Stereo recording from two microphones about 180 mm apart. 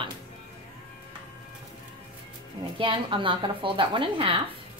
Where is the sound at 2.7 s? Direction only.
30° right (ahead or behind).